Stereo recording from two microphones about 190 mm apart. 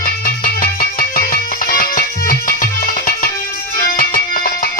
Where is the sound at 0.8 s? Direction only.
50° left (ahead or behind).